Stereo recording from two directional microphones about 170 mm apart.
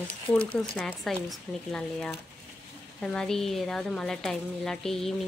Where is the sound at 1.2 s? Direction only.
5° left (ahead or behind).